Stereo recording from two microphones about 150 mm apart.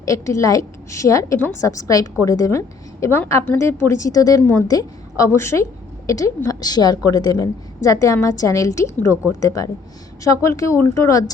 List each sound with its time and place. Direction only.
0.0 s a woman's voice: 20° left (ahead or behind)